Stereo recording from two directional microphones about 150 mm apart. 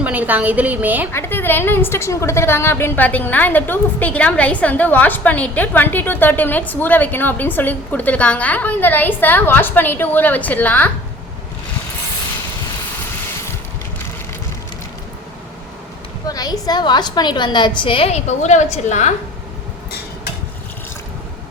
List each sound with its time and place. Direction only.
0.0 s a woman's voice: 10° right (ahead or behind)
1.1 s a woman's voice: 15° left (ahead or behind)
16.2 s a woman's voice: 25° left (ahead or behind); by 19.1 s 50° left (ahead or behind)